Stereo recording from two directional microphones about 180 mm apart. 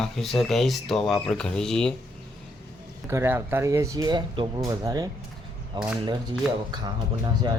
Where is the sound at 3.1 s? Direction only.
15° right (ahead or behind).